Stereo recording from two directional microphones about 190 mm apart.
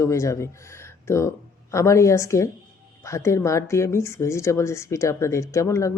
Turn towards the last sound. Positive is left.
turn(degrees=15)  # may be behind; listen again after turning